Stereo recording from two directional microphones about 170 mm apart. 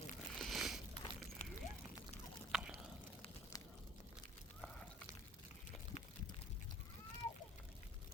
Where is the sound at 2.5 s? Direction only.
5° right (ahead or behind).